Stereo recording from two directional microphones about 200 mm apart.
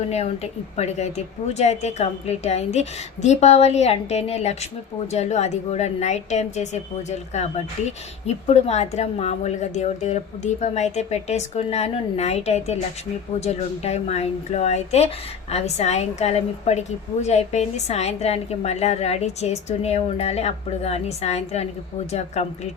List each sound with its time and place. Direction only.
0.8 s speech: 35° left (ahead or behind)